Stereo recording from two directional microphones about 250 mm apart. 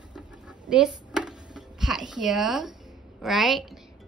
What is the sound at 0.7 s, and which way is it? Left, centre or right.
Music, centre.